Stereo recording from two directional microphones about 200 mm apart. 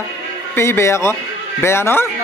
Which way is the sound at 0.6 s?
15° left (ahead or behind).